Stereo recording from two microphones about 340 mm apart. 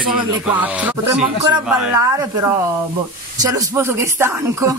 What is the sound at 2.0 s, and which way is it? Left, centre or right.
Speech, centre.